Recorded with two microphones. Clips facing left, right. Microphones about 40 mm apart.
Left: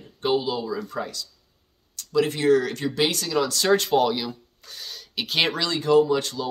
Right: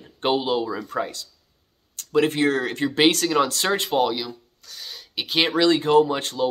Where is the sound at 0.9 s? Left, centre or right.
Right.